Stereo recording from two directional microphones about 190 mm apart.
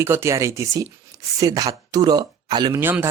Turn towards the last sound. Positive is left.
turn(degrees=-10)  # may be behind; listen again after turning